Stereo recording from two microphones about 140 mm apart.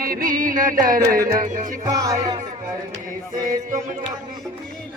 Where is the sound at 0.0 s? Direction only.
90° right.